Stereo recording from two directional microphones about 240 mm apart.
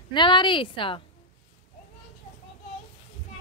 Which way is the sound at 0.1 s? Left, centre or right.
Centre.